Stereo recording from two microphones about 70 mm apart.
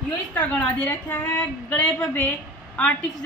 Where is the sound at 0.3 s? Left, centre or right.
Left.